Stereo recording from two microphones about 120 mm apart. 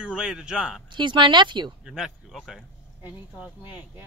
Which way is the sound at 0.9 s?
40° right (ahead or behind).